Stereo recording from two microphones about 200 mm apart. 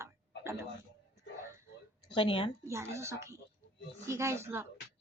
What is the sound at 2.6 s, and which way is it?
Speech, 15° right (ahead or behind).